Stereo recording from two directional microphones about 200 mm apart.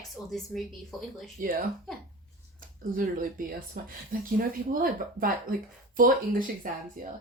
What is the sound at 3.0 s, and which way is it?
Speech, 45° right (ahead or behind).